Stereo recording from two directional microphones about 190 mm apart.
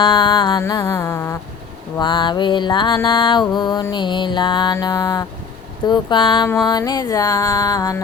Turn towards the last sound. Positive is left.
turn(degrees=20)  # may be behind; listen again after turning